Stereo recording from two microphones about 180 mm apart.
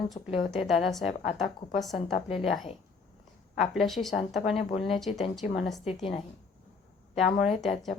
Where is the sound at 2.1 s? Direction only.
35° left (ahead or behind).